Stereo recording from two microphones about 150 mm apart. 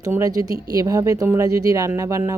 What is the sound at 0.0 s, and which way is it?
Speech, 20° right (ahead or behind).